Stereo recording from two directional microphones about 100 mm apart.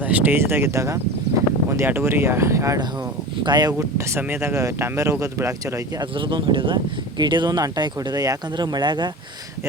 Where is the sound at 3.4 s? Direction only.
45° right (ahead or behind).